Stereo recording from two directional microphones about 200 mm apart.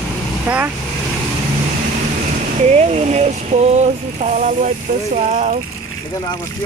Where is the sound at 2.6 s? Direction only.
35° right (ahead or behind).